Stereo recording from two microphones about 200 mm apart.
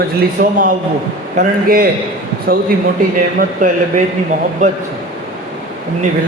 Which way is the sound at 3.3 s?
40° right (ahead or behind).